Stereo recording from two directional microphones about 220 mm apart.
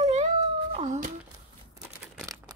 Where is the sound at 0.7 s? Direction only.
30° right (ahead or behind).